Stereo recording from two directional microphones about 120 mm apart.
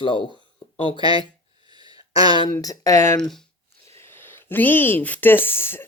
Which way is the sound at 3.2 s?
5° left (ahead or behind).